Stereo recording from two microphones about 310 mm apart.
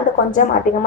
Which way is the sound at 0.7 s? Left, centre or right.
Left.